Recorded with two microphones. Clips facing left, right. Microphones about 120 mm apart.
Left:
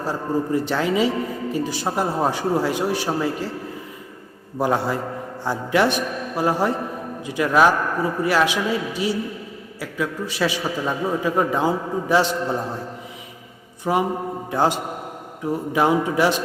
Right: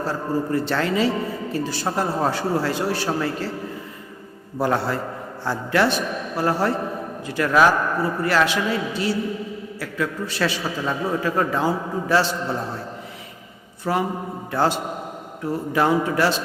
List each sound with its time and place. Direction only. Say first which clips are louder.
0.0 s a man's voice: left 1 dB; 15° left (ahead or behind)
4.5 s a man's voice: left 1 dB; 15° left (ahead or behind)
13.8 s a man's voice: left 2 dB; 15° left (ahead or behind)